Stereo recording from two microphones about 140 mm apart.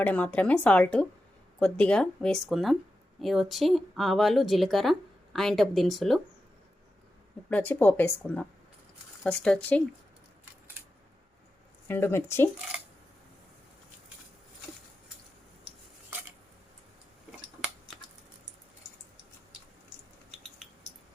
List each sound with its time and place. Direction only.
0.0 s speech: 10° left (ahead or behind)
7.5 s speech: 10° left (ahead or behind)
11.9 s speech: 15° left (ahead or behind)